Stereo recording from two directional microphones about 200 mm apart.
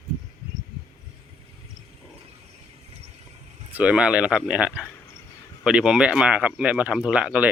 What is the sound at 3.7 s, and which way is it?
Speech, 5° right (ahead or behind).